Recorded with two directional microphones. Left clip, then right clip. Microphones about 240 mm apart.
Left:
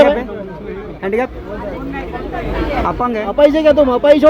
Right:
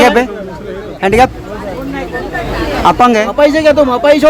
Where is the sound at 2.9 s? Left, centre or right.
Right.